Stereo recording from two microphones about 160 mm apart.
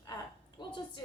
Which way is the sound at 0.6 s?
30° left (ahead or behind).